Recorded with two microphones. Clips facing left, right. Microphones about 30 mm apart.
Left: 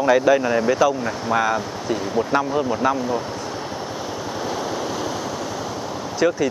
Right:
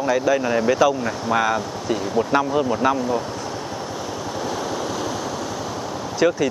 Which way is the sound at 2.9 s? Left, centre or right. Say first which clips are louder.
Right 1 dB; centre.